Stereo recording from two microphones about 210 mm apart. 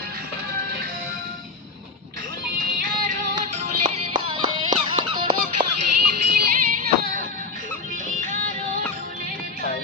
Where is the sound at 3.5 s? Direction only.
30° right (ahead or behind).